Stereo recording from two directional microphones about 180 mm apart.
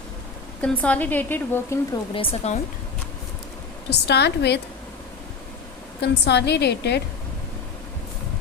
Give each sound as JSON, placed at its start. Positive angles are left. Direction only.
{"t": 0.6, "sound": "a woman's voice", "side_deg": 10}
{"t": 2.1, "sound": "speech", "side_deg": 30}
{"t": 3.8, "sound": "a woman's voice", "side_deg": 70}
{"t": 6.0, "sound": "a woman's voice", "side_deg": 70}